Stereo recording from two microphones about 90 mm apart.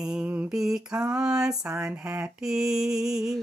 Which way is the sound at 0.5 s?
5° right (ahead or behind).